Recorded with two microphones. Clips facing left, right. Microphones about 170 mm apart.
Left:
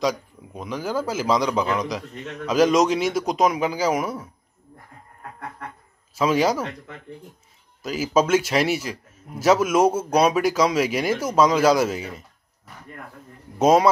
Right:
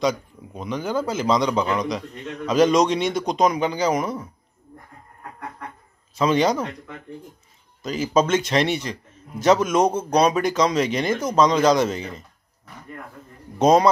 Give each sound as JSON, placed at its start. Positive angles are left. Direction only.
{"t": 0.0, "sound": "a man's voice", "side_deg": 0}
{"t": 6.1, "sound": "a man's voice", "side_deg": 5}
{"t": 7.8, "sound": "a man's voice", "side_deg": 5}
{"t": 13.6, "sound": "a man's voice", "side_deg": 5}